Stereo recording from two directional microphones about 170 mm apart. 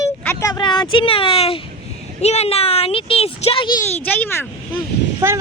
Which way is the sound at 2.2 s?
40° left (ahead or behind).